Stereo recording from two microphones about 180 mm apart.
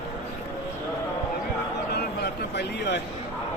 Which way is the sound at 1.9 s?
70° left (ahead or behind).